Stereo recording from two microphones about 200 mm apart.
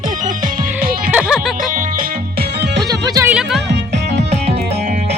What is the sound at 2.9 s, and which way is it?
Music, 20° right (ahead or behind).